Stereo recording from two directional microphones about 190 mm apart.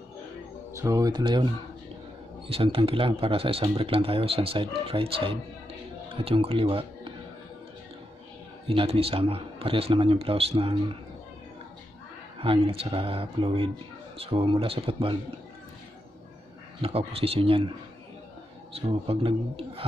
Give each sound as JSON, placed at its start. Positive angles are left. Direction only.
{"t": 0.7, "sound": "speech", "side_deg": -15}
{"t": 8.6, "sound": "speech", "side_deg": -30}
{"t": 12.4, "sound": "speech", "side_deg": -30}
{"t": 16.8, "sound": "speech", "side_deg": -30}
{"t": 18.7, "sound": "speech", "side_deg": -30}